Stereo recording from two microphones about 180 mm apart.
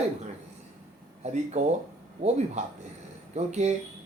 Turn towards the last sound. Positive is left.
turn(degrees=-40)  # may be behind; listen again after turning